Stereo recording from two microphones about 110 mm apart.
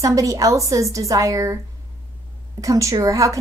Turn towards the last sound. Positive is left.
turn(degrees=-30)  # may be behind; listen again after turning